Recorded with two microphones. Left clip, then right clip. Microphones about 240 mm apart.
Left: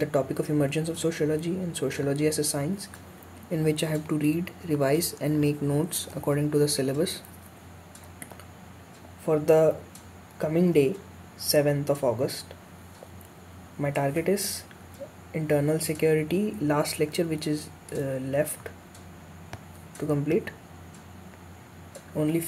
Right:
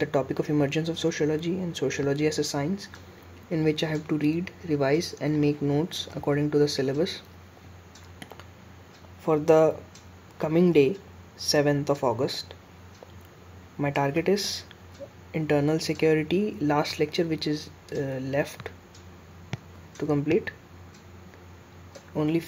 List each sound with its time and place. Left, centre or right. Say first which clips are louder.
0.0 s speech: even; centre
9.2 s speech: right 1 dB; centre
13.7 s speech: right 1 dB; centre
20.0 s speech: right 1 dB; centre
22.1 s speech: right 1 dB; centre